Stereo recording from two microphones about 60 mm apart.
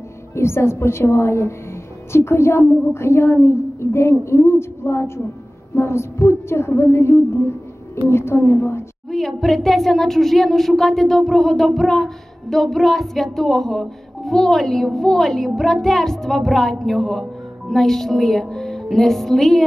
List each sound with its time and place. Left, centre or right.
0.4 s a woman's voice: left
9.1 s speech: centre